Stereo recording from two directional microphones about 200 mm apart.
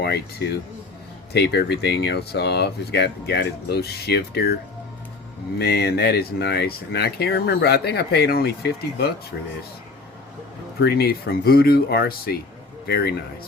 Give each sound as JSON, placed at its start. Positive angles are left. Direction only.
{"t": 0.0, "sound": "speech", "side_deg": 55}
{"t": 5.5, "sound": "speech", "side_deg": 55}
{"t": 10.8, "sound": "speech", "side_deg": 55}